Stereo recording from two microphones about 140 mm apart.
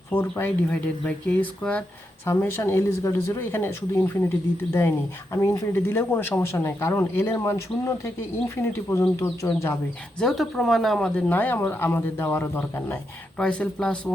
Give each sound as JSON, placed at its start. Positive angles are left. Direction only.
{"t": 0.1, "sound": "speech", "side_deg": 15}
{"t": 10.2, "sound": "speech", "side_deg": 0}